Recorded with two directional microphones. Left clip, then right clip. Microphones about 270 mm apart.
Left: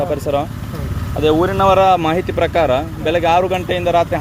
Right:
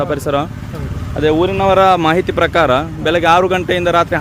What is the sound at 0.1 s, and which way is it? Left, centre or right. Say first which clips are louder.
Speech: right 1 dB; right.